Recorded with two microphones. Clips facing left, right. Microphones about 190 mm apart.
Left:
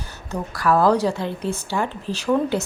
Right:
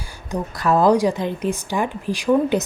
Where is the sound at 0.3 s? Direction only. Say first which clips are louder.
Right 1 dB; 20° right (ahead or behind).